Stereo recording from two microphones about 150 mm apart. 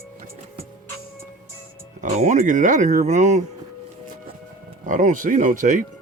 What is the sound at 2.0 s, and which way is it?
Speech, 55° right (ahead or behind).